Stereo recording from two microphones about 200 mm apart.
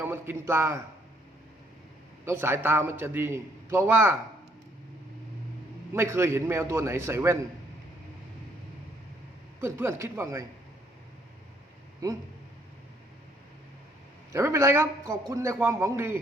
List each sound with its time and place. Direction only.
0.0 s a man's voice: 10° right (ahead or behind)
2.2 s a man's voice: 10° right (ahead or behind)
5.9 s a man's voice: 15° right (ahead or behind)
9.6 s a man's voice: 10° right (ahead or behind)
12.0 s a man's voice: 15° right (ahead or behind)
14.3 s a man's voice: 15° right (ahead or behind)